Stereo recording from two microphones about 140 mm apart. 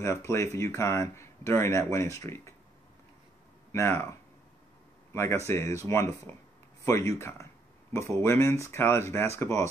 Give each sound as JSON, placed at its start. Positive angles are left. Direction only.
{"t": 0.0, "sound": "speech", "side_deg": 20}
{"t": 3.7, "sound": "speech", "side_deg": 15}
{"t": 5.1, "sound": "speech", "side_deg": 20}